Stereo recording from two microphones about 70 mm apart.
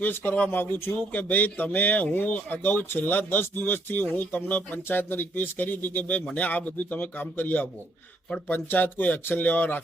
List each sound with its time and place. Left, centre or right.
0.0 s speech: left